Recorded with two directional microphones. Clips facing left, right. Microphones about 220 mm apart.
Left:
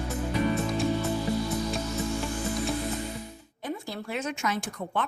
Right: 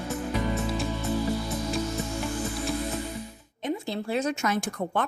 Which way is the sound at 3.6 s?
25° right (ahead or behind).